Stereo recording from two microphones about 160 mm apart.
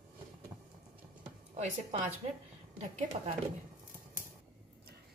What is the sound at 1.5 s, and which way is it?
Speech, 45° right (ahead or behind).